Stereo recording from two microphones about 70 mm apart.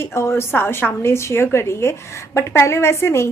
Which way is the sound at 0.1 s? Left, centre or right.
Left.